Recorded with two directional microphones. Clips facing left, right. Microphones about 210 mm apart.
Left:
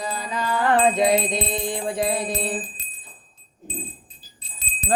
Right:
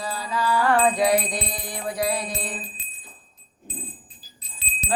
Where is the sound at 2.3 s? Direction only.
30° left (ahead or behind).